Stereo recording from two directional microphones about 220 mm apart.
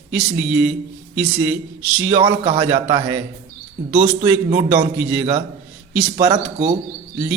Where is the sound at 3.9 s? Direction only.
35° right (ahead or behind).